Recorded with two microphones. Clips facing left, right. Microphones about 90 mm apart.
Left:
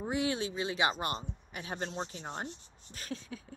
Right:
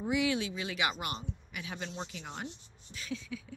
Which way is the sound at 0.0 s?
35° left (ahead or behind).